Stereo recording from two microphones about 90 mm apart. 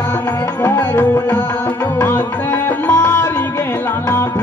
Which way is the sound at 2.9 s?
25° left (ahead or behind).